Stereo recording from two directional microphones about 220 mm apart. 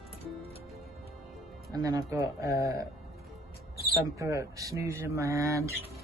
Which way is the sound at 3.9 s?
15° right (ahead or behind).